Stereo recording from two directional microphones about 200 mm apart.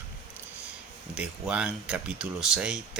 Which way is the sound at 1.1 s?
5° right (ahead or behind).